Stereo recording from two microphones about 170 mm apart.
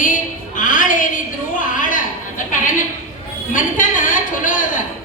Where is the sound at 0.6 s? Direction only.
50° left (ahead or behind).